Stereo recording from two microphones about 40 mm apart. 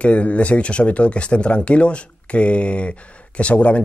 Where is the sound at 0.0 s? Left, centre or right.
Left.